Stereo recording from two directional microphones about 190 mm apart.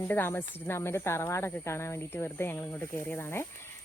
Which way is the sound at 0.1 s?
10° left (ahead or behind).